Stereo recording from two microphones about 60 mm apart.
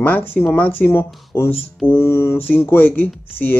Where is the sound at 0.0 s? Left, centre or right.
Left.